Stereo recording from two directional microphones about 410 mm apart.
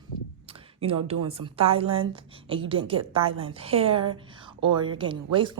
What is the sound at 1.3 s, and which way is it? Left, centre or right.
A woman's voice, centre.